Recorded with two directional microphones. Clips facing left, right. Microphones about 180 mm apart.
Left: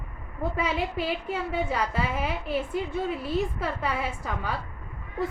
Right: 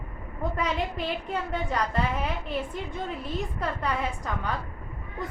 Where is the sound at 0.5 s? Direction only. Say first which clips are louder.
Left 1 dB; 5° left (ahead or behind).